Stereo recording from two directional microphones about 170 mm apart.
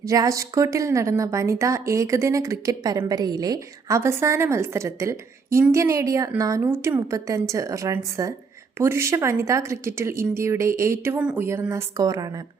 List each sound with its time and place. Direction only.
0.0 s a woman's voice: 20° right (ahead or behind)